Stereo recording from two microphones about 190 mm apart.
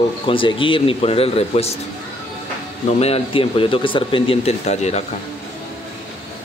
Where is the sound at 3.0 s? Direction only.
30° left (ahead or behind).